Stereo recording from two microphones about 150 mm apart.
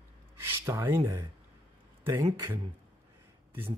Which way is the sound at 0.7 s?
15° right (ahead or behind).